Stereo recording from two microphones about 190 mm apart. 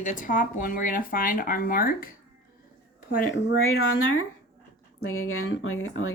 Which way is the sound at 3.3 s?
80° left.